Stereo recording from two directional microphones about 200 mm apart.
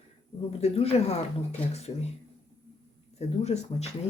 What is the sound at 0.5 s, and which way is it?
Speech, 30° left (ahead or behind).